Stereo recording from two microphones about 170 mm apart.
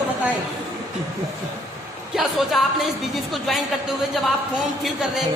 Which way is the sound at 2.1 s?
Centre (ahead or behind).